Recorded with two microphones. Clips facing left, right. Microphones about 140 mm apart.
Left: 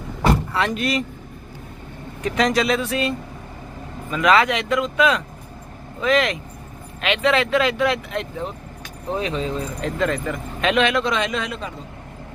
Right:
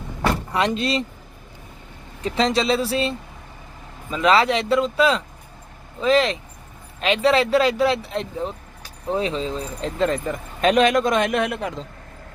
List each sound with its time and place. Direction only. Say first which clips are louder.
0.5 s speech: right 1 dB; 25° right (ahead or behind)
2.2 s speech: left 1 dB; 30° right (ahead or behind); by 11.9 s 80° right